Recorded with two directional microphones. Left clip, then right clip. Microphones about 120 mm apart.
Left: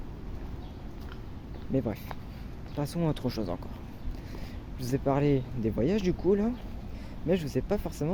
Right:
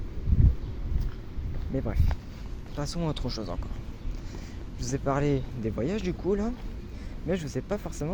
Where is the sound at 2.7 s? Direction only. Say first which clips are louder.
Left 1 dB; 50° left (ahead or behind).